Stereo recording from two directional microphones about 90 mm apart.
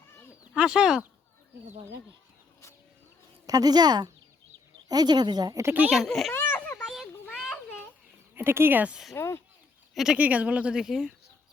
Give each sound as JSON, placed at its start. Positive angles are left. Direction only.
{"t": 0.5, "sound": "speech", "side_deg": -10}
{"t": 3.4, "sound": "speech", "side_deg": -45}
{"t": 5.9, "sound": "a child's voice", "side_deg": 0}
{"t": 6.3, "sound": "a sound", "side_deg": 25}
{"t": 6.8, "sound": "children playing", "side_deg": 0}
{"t": 8.4, "sound": "speech", "side_deg": -25}
{"t": 9.1, "sound": "speech", "side_deg": 30}
{"t": 9.9, "sound": "speech", "side_deg": -5}
{"t": 10.2, "sound": "speech", "side_deg": -15}